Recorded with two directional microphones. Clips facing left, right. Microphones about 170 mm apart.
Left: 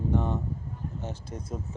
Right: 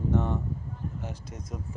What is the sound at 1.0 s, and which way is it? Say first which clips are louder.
Speech: left 2 dB; 30° left (ahead or behind).